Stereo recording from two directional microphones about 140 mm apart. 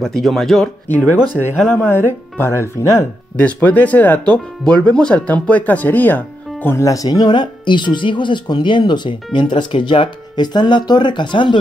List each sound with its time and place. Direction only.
0.0 s speech: centre (ahead or behind)
0.8 s speech: 15° left (ahead or behind); by 11.6 s 35° left (ahead or behind)